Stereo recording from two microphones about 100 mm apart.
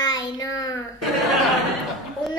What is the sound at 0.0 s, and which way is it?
Child singing, 40° left (ahead or behind).